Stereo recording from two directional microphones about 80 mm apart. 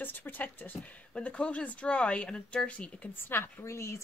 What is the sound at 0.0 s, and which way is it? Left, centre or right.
Speech, left.